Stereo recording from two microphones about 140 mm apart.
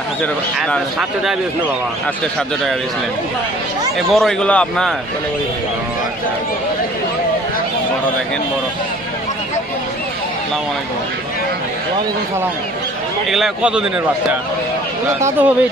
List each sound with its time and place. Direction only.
4.1 s a man's voice: centre (ahead or behind)
13.3 s a man's voice: 5° right (ahead or behind)
15.1 s a man's voice: 15° right (ahead or behind)